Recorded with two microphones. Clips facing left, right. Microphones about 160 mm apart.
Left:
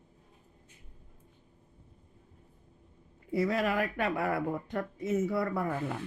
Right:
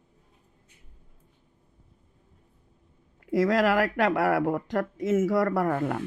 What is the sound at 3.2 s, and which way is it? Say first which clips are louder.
Speech: right 6 dB; 90° right.